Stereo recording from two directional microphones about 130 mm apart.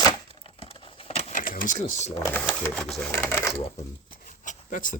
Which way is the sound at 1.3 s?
90° left.